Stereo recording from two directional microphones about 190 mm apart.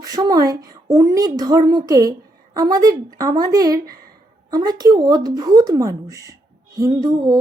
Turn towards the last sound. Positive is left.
turn(degrees=-20)  # may be behind; listen again after turning